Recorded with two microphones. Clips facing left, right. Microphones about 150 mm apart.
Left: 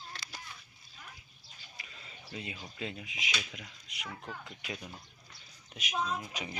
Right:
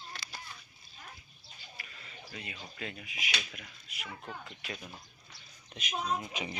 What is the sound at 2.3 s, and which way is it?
Speech, 25° left (ahead or behind).